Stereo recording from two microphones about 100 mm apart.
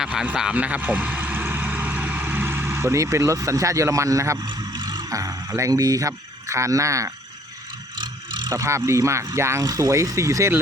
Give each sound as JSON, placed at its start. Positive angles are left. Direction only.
{"t": 0.0, "sound": "speech", "side_deg": -5}
{"t": 4.4, "sound": "speech", "side_deg": -45}
{"t": 7.9, "sound": "vehicle", "side_deg": -50}
{"t": 8.5, "sound": "speech", "side_deg": -30}